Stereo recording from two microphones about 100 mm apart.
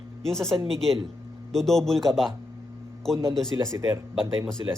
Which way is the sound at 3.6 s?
30° right (ahead or behind).